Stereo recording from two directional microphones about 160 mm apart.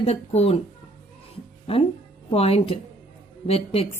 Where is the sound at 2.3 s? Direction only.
40° left (ahead or behind).